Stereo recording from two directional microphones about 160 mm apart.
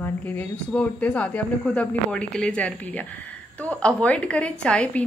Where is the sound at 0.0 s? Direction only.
10° left (ahead or behind).